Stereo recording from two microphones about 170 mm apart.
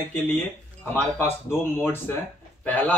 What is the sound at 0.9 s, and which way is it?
A man's voice, 15° left (ahead or behind).